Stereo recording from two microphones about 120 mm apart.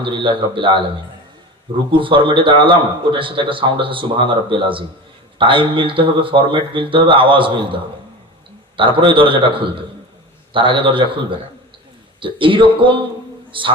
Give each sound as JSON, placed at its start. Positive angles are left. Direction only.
{"t": 0.0, "sound": "a man's voice", "side_deg": -45}
{"t": 1.9, "sound": "a man's voice", "side_deg": -45}